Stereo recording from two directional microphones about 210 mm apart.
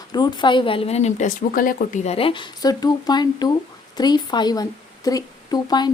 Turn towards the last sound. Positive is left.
turn(degrees=20)  # may be behind; listen again after turning